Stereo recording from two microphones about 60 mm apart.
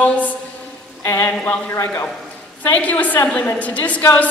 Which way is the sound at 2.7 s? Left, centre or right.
Left.